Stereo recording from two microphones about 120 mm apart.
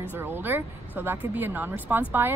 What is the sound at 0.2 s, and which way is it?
A woman's voice, 15° right (ahead or behind).